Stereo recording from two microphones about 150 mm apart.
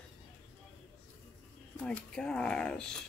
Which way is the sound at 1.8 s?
5° left (ahead or behind).